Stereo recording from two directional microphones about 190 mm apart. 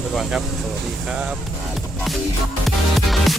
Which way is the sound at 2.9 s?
Centre (ahead or behind).